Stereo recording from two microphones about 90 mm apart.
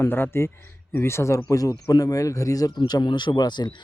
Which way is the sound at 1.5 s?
40° left (ahead or behind).